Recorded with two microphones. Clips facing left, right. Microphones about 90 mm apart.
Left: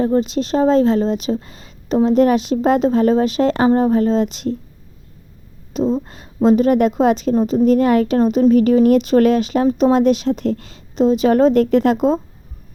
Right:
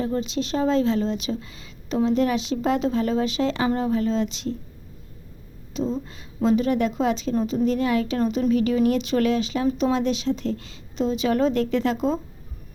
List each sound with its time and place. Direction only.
0.0 s a woman's voice: 40° left (ahead or behind)
5.7 s a woman's voice: 50° left (ahead or behind)